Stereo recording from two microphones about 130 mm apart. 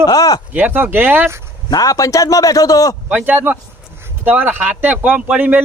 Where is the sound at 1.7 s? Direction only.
25° left (ahead or behind).